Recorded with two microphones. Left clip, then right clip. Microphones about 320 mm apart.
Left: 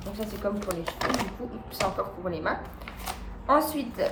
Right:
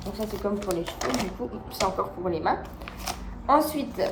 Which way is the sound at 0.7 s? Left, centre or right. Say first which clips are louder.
Right 1 dB; centre.